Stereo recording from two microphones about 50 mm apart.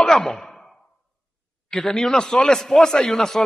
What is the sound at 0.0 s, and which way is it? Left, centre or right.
Sigh, centre.